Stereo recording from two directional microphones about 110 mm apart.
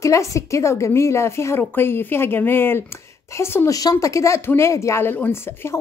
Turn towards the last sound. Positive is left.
turn(degrees=20)  # may be behind; listen again after turning